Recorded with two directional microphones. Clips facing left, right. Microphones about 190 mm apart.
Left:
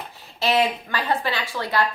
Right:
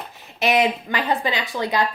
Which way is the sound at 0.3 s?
20° right (ahead or behind).